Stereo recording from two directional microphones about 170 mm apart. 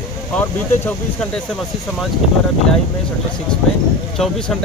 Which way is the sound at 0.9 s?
5° left (ahead or behind).